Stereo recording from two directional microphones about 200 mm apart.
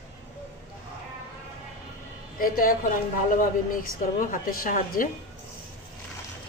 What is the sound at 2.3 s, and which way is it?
Speech, 45° left (ahead or behind).